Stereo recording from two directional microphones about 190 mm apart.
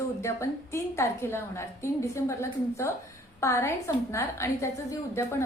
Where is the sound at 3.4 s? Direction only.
15° left (ahead or behind).